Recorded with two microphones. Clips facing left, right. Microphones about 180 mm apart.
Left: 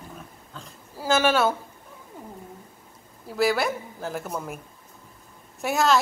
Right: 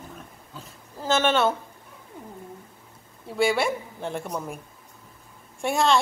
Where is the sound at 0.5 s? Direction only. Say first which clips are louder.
Even; 10° right (ahead or behind).